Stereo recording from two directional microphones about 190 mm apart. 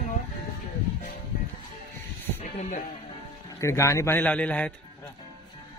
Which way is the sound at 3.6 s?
15° left (ahead or behind).